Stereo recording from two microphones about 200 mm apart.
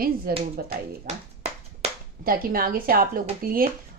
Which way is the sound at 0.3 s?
50° right (ahead or behind).